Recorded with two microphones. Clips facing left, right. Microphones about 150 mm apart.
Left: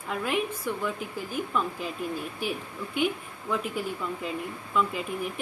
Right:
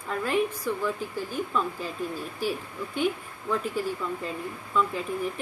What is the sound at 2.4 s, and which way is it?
Speech, 30° right (ahead or behind).